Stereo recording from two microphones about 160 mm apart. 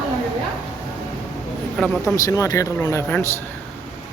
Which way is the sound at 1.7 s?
5° left (ahead or behind).